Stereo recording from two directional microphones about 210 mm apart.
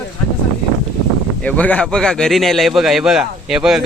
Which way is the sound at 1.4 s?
5° left (ahead or behind).